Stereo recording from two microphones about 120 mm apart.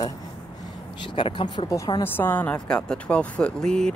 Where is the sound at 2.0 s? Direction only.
15° left (ahead or behind).